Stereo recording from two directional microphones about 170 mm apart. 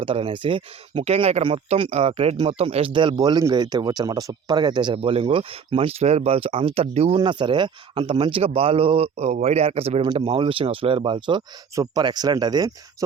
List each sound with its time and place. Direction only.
0.0 s speech: 30° right (ahead or behind)